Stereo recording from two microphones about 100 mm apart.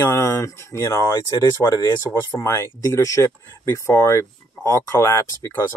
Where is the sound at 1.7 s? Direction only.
45° left (ahead or behind).